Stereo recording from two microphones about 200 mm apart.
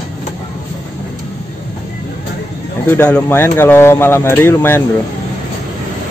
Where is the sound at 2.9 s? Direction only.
10° left (ahead or behind).